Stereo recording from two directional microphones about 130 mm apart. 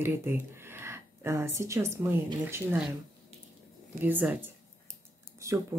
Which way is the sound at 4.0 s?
15° right (ahead or behind).